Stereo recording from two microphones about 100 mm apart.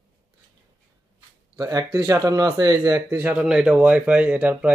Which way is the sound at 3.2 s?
10° right (ahead or behind).